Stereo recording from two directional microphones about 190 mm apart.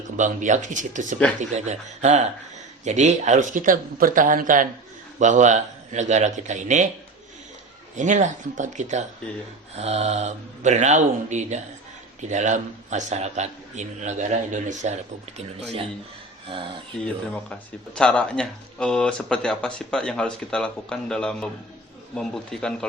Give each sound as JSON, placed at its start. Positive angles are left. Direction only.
{"t": 0.2, "sound": "a man's voice", "side_deg": -40}
{"t": 7.9, "sound": "a man's voice", "side_deg": -40}
{"t": 17.3, "sound": "speech", "side_deg": 5}